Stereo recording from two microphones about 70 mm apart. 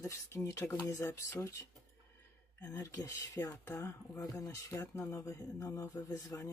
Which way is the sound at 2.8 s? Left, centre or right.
Left.